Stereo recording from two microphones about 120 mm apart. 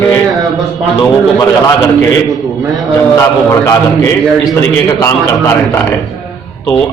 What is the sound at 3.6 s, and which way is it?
A man's voice, 25° left (ahead or behind).